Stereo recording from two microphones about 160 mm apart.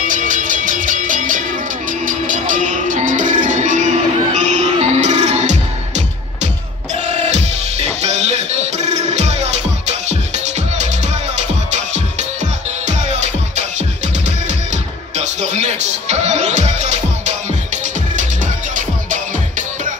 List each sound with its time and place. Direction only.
0.1 s music: 55° right (ahead or behind)